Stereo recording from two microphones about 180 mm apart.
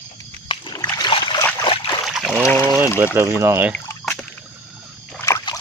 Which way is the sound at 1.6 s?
30° left (ahead or behind).